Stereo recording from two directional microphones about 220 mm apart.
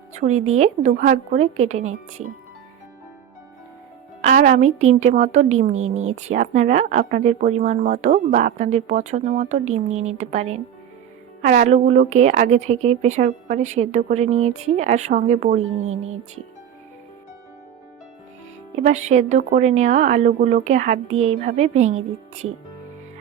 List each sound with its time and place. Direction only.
0.1 s a woman's voice: 30° right (ahead or behind)
4.2 s a woman's voice: 35° right (ahead or behind)
18.8 s a woman's voice: 30° right (ahead or behind)